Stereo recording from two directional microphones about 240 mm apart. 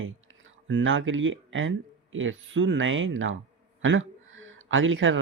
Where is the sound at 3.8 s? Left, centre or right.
Right.